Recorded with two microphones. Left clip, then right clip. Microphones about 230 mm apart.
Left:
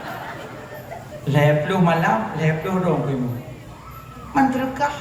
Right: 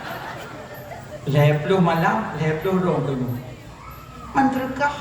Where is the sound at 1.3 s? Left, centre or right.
Left.